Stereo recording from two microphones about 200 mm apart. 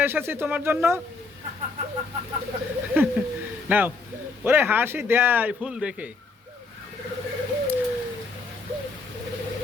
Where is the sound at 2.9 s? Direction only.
10° right (ahead or behind).